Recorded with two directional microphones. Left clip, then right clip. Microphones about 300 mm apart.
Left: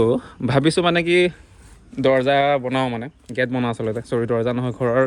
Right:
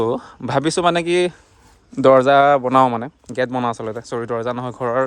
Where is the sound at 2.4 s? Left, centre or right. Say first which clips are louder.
Right 6 dB; right.